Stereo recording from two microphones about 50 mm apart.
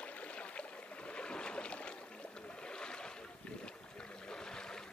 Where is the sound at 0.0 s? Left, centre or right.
Left.